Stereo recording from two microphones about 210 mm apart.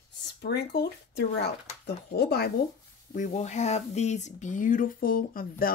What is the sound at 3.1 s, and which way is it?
Speech, 35° left (ahead or behind).